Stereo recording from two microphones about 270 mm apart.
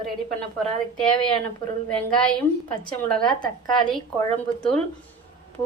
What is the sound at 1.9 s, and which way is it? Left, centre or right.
Speech, centre.